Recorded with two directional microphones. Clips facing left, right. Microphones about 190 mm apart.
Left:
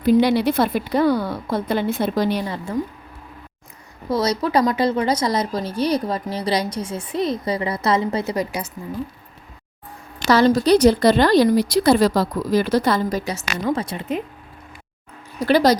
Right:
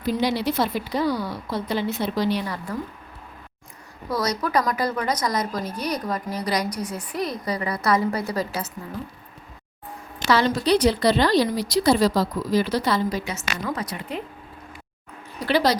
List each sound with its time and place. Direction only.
0.0 s a woman's voice: 60° left (ahead or behind)
2.4 s a woman's voice: 25° left (ahead or behind)
4.1 s a woman's voice: 30° left (ahead or behind)
10.2 s a woman's voice: 40° left (ahead or behind)
13.7 s a woman's voice: 25° left (ahead or behind)
15.4 s a woman's voice: 45° left (ahead or behind)